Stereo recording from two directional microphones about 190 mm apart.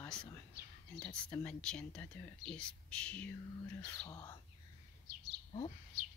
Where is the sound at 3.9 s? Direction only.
15° left (ahead or behind).